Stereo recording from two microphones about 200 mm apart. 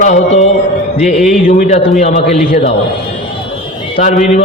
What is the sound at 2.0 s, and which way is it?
Speech, 35° left (ahead or behind).